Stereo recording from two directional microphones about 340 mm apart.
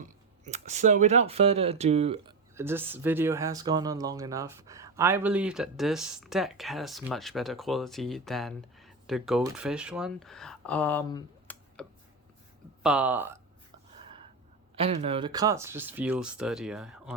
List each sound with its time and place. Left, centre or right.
0.0 s speech: right
14.8 s speech: centre